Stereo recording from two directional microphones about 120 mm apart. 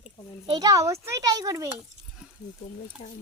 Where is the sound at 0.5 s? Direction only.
30° right (ahead or behind).